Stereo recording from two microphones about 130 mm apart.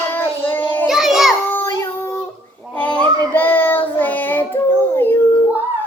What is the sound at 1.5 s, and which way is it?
Child singing, 20° left (ahead or behind).